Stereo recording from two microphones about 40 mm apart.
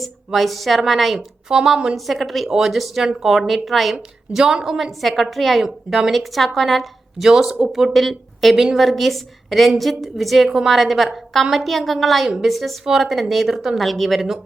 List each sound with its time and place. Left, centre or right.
0.3 s a woman's voice: centre
1.5 s speech: centre
2.0 s a woman's voice: centre
4.3 s speech: centre
4.8 s a woman's voice: centre
5.6 s speech: centre
6.1 s a woman's voice: centre
7.9 s a woman's voice: centre